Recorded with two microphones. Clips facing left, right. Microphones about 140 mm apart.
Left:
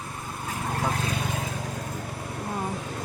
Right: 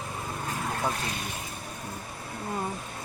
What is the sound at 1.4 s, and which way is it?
Vehicle, 90° left.